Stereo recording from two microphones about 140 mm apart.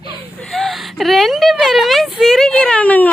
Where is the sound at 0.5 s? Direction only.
Centre (ahead or behind).